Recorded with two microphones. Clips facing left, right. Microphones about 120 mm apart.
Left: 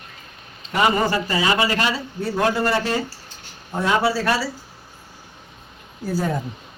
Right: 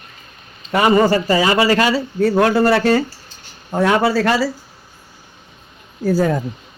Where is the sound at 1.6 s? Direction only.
90° right.